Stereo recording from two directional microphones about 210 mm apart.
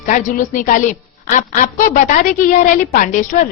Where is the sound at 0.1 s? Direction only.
40° left (ahead or behind).